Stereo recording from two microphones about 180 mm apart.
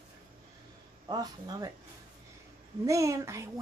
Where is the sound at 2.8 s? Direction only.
15° right (ahead or behind).